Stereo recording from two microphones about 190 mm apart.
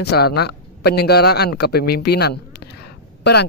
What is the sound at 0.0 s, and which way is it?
Speech, 60° left (ahead or behind).